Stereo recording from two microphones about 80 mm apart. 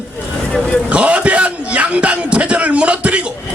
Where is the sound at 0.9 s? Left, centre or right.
Centre.